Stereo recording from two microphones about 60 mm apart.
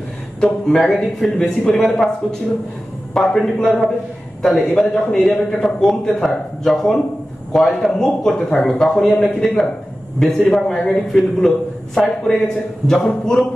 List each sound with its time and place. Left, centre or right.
0.4 s a man's voice: centre
3.2 s a man's voice: centre
10.7 s a man's voice: centre